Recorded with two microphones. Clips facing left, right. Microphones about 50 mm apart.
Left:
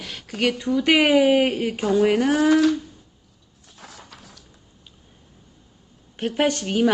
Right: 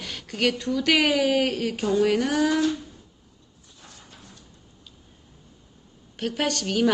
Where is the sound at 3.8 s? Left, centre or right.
Left.